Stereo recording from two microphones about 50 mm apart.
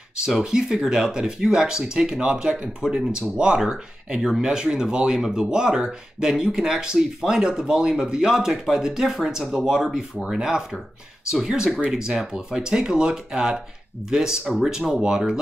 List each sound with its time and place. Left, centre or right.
0.4 s speech: centre